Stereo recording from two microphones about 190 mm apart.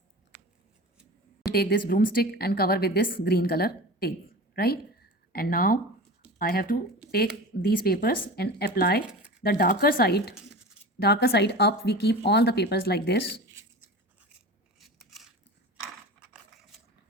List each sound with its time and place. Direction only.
1.5 s a woman's voice: 50° left (ahead or behind)
14.2 s scissors: 5° right (ahead or behind)